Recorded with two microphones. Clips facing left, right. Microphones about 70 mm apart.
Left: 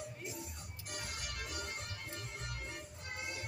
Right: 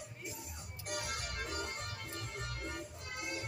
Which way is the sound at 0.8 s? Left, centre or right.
Right.